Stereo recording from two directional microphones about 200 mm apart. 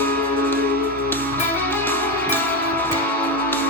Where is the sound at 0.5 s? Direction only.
50° right (ahead or behind).